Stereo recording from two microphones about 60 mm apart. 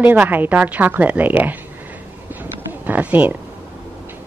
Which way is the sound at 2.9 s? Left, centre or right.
Right.